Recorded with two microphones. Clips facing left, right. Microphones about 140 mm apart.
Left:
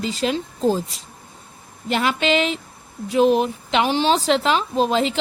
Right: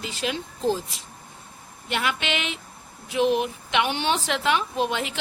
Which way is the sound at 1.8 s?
35° left (ahead or behind).